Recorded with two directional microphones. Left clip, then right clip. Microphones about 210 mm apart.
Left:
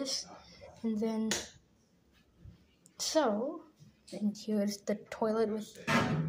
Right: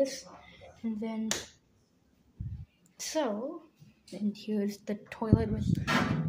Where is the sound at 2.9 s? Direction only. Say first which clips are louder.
Left 2 dB; centre (ahead or behind).